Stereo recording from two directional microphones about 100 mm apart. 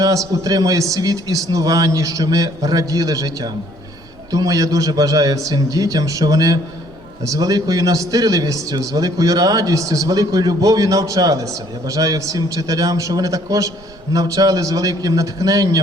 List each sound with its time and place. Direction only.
0.4 s a man's voice: 35° right (ahead or behind)